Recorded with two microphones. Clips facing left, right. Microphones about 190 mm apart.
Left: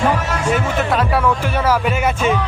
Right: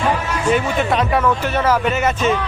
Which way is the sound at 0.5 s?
Centre (ahead or behind).